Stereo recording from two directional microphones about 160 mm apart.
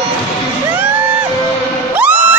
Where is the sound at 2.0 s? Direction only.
10° right (ahead or behind).